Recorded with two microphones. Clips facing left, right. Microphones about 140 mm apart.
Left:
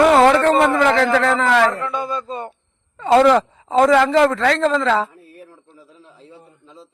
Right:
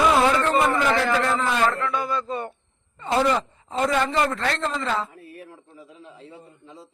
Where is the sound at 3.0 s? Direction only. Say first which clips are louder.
Left 9 dB; 85° left.